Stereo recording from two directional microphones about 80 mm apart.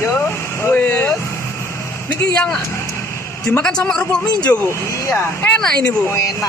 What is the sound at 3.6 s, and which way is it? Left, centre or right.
Speech, centre.